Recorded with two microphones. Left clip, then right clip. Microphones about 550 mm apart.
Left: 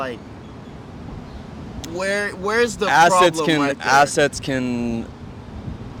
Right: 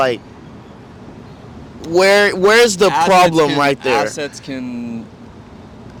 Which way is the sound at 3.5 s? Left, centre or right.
Left.